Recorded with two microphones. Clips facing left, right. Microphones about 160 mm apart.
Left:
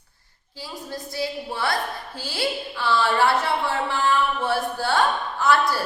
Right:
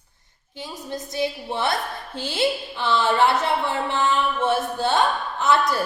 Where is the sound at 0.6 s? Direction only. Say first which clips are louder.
Right 2 dB; 20° right (ahead or behind).